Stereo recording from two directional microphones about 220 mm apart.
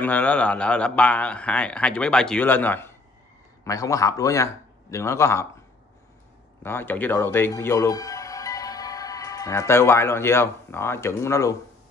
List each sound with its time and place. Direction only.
0.0 s a man's voice: 5° left (ahead or behind)
6.6 s speech: 10° left (ahead or behind)